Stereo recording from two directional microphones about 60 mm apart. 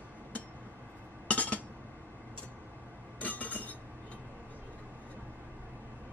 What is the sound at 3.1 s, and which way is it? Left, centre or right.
Train, left.